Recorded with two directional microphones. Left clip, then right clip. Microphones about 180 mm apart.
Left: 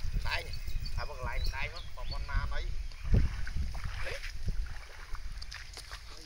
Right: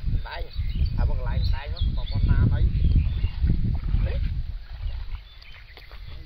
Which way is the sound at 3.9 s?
45° right (ahead or behind).